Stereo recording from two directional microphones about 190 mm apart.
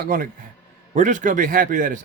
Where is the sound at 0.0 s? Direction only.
50° right (ahead or behind).